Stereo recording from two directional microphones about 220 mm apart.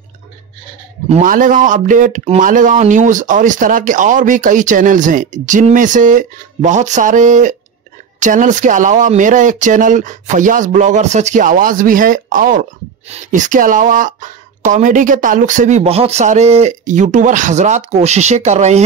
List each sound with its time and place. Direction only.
1.0 s speech: 35° right (ahead or behind)